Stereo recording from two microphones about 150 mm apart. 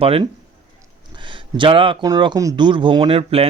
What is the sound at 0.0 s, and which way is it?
Speech, 40° right (ahead or behind).